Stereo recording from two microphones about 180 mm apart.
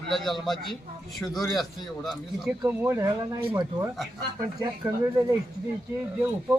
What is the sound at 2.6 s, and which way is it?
Speech, 15° right (ahead or behind).